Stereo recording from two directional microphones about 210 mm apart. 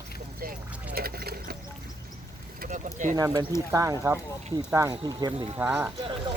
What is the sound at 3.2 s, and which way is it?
Speech, 15° right (ahead or behind).